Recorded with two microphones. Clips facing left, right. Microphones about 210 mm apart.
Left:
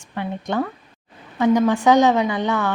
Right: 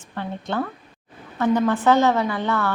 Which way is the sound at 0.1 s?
15° left (ahead or behind).